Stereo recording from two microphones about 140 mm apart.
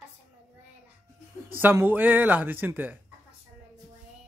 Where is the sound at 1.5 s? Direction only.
15° right (ahead or behind).